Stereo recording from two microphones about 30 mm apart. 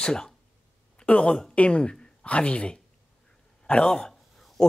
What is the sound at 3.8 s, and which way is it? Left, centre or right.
Speech, left.